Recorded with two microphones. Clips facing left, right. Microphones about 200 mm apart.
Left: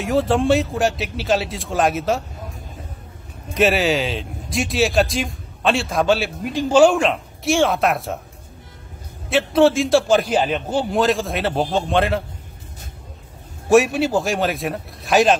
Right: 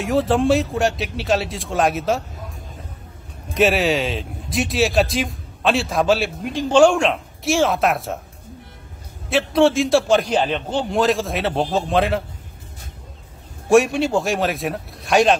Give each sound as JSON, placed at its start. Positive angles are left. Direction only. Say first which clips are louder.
{"t": 0.0, "sound": "speech", "louder": "even", "side_deg": 0}
{"t": 3.5, "sound": "speech", "louder": "even", "side_deg": 0}
{"t": 9.3, "sound": "speech", "louder": "left 1 dB", "side_deg": 0}
{"t": 13.7, "sound": "speech", "louder": "even", "side_deg": 0}